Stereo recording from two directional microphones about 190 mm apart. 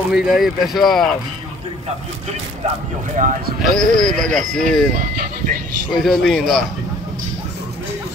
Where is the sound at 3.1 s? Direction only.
45° right (ahead or behind).